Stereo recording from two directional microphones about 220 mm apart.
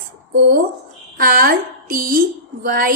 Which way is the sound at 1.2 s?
40° right (ahead or behind).